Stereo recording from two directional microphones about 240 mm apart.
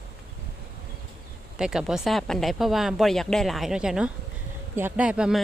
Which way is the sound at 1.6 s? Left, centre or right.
Centre.